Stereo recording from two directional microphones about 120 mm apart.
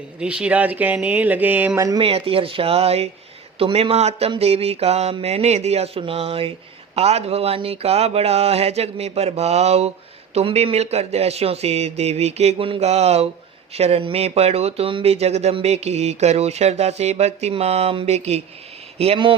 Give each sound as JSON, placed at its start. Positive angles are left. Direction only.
{"t": 0.2, "sound": "speech", "side_deg": -10}
{"t": 2.0, "sound": "speech", "side_deg": -55}